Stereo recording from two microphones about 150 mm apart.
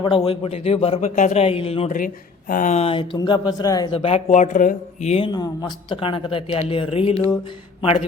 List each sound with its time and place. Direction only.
0.0 s speech: 35° left (ahead or behind)
2.5 s speech: 60° left (ahead or behind)
2.7 s speech: 40° left (ahead or behind)
3.9 s speech: 40° left (ahead or behind)
5.3 s speech: 25° left (ahead or behind)